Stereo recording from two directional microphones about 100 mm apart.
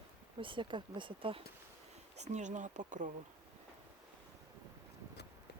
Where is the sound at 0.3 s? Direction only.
55° right (ahead or behind).